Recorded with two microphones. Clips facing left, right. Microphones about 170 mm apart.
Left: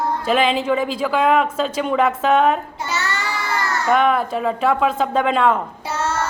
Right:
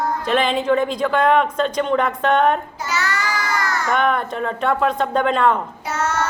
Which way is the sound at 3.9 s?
5° left (ahead or behind).